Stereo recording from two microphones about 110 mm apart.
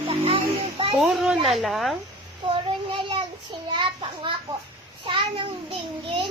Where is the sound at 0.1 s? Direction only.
55° right (ahead or behind).